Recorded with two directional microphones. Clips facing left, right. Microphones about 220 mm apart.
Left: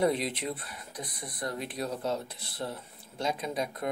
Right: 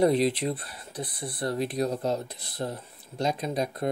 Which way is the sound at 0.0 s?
35° right (ahead or behind).